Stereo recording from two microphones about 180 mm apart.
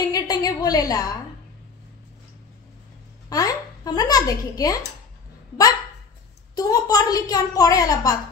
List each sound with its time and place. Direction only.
0.1 s a woman's voice: 20° left (ahead or behind)
3.3 s a woman's voice: 20° left (ahead or behind)
6.5 s a woman's voice: 20° left (ahead or behind)